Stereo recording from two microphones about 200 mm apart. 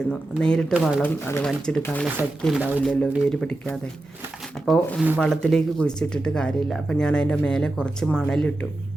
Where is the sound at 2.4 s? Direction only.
5° right (ahead or behind).